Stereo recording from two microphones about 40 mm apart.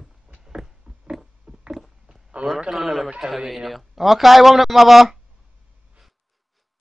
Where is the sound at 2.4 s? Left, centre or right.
Right.